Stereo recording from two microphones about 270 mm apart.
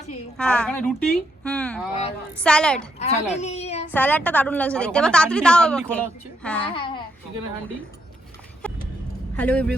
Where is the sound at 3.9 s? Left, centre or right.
Centre.